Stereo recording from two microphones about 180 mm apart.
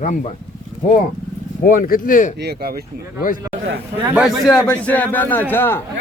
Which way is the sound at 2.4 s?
60° right (ahead or behind).